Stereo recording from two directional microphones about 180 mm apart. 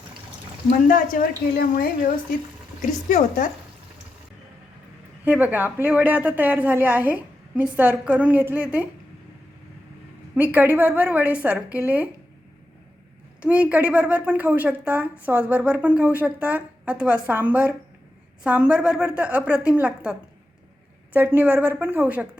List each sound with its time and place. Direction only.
0.7 s a woman's voice: 45° left (ahead or behind)
2.8 s speech: 45° left (ahead or behind)
5.2 s a woman's voice: 10° right (ahead or behind)
10.3 s a woman's voice: 10° right (ahead or behind)
13.4 s a woman's voice: 5° right (ahead or behind)